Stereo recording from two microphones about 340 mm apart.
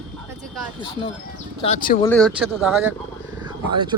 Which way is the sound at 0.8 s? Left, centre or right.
Centre.